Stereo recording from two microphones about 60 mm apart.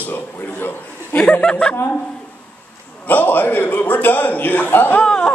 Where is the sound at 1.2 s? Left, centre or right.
Left.